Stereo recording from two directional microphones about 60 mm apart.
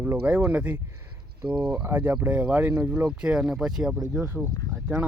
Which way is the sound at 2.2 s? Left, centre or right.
Right.